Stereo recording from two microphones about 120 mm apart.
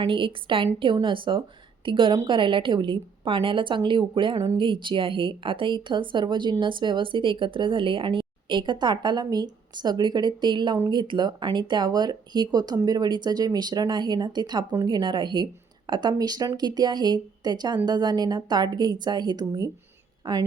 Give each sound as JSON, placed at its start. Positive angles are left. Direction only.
{"t": 0.0, "sound": "a woman's voice", "side_deg": -45}